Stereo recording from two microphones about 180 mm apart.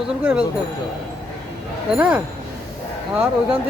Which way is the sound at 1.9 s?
5° right (ahead or behind).